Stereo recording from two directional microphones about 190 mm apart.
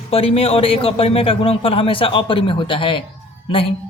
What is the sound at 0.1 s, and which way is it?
A man's voice, 30° left (ahead or behind).